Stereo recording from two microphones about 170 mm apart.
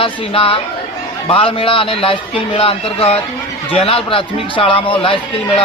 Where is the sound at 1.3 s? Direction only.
30° left (ahead or behind).